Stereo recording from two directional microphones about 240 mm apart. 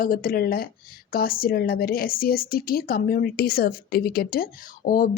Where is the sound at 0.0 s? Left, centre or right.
Left.